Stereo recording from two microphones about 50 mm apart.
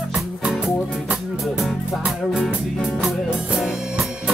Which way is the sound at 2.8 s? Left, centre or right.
Centre.